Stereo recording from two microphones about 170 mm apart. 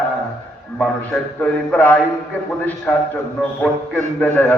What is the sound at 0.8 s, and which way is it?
A man's voice, 5° left (ahead or behind).